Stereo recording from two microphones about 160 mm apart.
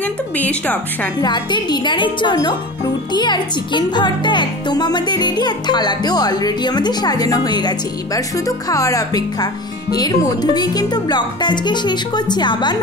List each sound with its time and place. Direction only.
0.0 s a woman's voice: 10° left (ahead or behind)
1.2 s speech: 25° left (ahead or behind)